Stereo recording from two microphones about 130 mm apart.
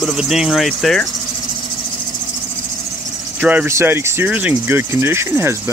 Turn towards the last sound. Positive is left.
turn(degrees=-20)  # may be behind; listen again after turning